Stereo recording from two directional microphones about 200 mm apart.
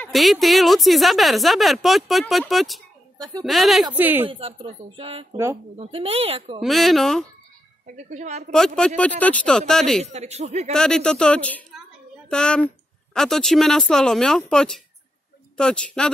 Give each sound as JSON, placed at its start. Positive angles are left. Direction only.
{"t": 0.0, "sound": "a woman's voice", "side_deg": 0}
{"t": 4.3, "sound": "speech", "side_deg": -25}
{"t": 6.6, "sound": "a woman's voice", "side_deg": 0}
{"t": 7.8, "sound": "a woman's voice", "side_deg": -35}
{"t": 8.5, "sound": "a woman's voice", "side_deg": 5}
{"t": 10.0, "sound": "a woman's voice", "side_deg": -30}
{"t": 10.7, "sound": "a woman's voice", "side_deg": 5}